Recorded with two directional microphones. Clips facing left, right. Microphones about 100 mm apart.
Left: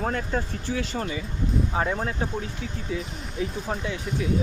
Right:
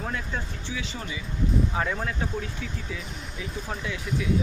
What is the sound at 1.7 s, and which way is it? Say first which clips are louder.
Speech: left 2 dB; 30° left (ahead or behind).